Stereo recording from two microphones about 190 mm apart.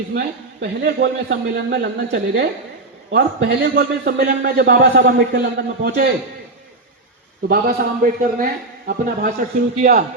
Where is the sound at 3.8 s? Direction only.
60° right (ahead or behind).